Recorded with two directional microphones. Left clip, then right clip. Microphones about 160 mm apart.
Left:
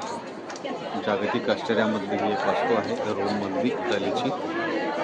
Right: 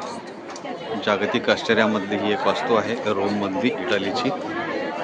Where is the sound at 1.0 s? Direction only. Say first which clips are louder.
Right 4 dB; 40° right (ahead or behind).